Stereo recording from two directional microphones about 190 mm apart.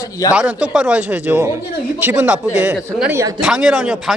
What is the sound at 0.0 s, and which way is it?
Speech, 20° left (ahead or behind).